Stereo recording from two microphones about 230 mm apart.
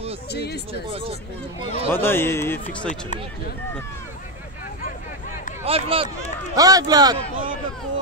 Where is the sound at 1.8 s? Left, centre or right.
Centre.